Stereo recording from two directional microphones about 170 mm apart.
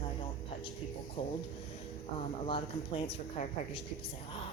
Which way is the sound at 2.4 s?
30° left (ahead or behind).